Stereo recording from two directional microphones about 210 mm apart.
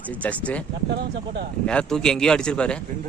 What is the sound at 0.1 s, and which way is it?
Speech, 5° left (ahead or behind).